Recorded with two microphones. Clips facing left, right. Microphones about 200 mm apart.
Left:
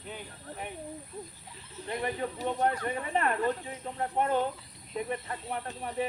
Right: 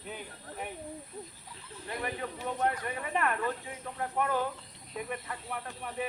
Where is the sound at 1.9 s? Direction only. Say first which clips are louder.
Left 4 dB; 25° left (ahead or behind).